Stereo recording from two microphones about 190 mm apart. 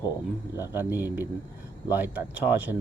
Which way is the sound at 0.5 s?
10° right (ahead or behind).